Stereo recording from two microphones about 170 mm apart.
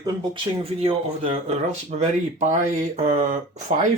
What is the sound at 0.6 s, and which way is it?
Speech, 35° right (ahead or behind).